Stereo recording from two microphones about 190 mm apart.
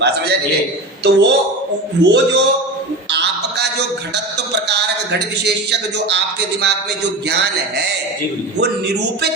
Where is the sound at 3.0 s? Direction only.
65° right (ahead or behind).